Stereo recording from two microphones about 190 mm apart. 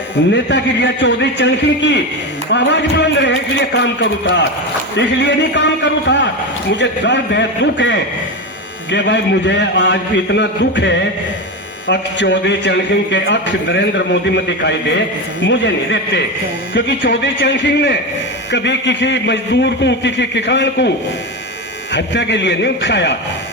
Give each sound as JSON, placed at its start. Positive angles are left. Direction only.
{"t": 0.3, "sound": "a man's voice", "side_deg": 70}
{"t": 17.3, "sound": "a man's voice", "side_deg": 70}
{"t": 21.9, "sound": "a man's voice", "side_deg": 70}